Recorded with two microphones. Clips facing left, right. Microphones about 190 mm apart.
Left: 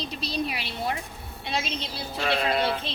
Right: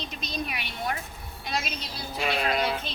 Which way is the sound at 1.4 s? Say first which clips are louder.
Left 2 dB; 25° left (ahead or behind).